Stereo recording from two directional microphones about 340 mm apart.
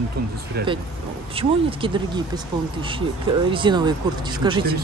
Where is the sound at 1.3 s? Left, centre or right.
Centre.